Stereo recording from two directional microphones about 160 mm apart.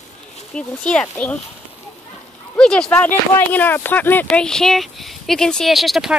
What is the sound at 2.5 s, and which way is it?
Speech, 5° left (ahead or behind).